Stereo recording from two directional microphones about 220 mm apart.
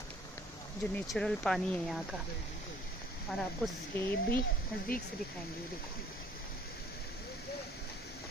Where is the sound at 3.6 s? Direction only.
5° left (ahead or behind).